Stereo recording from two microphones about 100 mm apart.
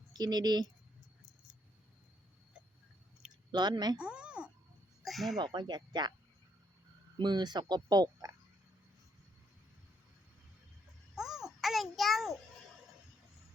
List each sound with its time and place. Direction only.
0.1 s speech: 45° right (ahead or behind)
3.5 s speech: 45° right (ahead or behind)
3.9 s a sound: 10° right (ahead or behind)
5.0 s speech: centre (ahead or behind)
5.4 s speech: 50° right (ahead or behind)
7.2 s speech: 45° right (ahead or behind)
11.1 s a sound: 5° right (ahead or behind)